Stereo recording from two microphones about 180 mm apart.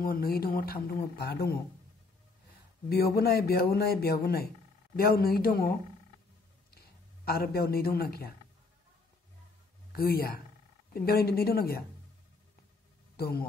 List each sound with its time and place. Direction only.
0.0 s speech: 55° left (ahead or behind)
2.9 s speech: 60° left (ahead or behind)
7.2 s speech: 60° left (ahead or behind)
9.9 s speech: 55° left (ahead or behind)
13.1 s speech: 60° left (ahead or behind)